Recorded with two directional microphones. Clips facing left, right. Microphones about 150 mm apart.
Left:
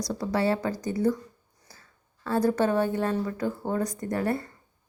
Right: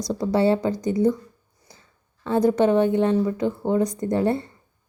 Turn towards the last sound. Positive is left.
turn(degrees=-25)  # may be behind; listen again after turning